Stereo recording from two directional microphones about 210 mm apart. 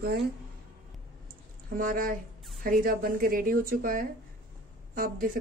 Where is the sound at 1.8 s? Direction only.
40° right (ahead or behind).